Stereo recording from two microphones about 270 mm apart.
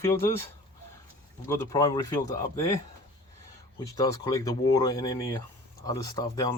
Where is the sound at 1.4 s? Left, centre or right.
Centre.